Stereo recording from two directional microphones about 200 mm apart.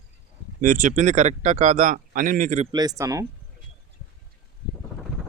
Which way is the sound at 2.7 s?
20° right (ahead or behind).